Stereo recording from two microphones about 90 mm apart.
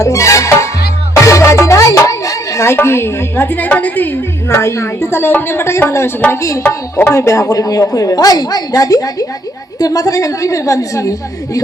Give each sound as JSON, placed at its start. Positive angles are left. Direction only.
{"t": 0.0, "sound": "music", "side_deg": 35}
{"t": 1.1, "sound": "speech", "side_deg": 35}